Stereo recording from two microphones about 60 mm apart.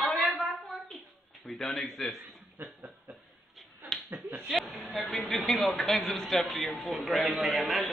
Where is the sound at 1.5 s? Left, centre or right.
Centre.